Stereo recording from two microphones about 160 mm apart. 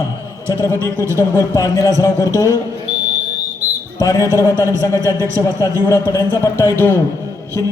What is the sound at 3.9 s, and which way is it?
Speech, 20° left (ahead or behind).